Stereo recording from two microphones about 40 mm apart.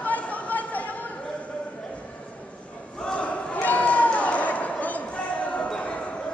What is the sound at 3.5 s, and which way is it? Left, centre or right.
Run, left.